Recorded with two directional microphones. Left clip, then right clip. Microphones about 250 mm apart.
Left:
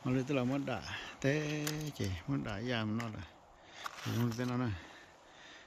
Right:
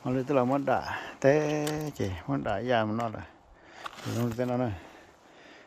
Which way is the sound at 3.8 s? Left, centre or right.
Right.